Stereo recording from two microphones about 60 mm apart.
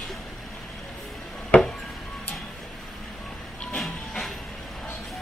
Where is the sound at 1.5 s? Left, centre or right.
Left.